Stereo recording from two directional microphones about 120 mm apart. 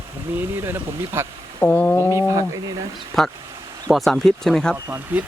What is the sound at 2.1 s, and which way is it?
Speech, 25° right (ahead or behind).